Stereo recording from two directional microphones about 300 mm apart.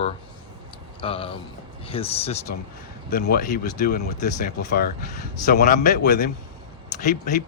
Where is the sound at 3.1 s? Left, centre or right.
Left.